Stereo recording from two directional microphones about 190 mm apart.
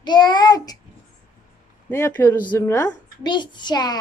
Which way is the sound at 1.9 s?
10° left (ahead or behind).